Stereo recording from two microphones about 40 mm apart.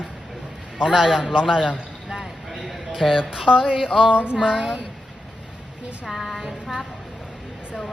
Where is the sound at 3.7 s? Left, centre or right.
Centre.